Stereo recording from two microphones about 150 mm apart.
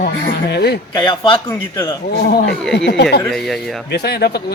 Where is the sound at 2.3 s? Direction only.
90° left.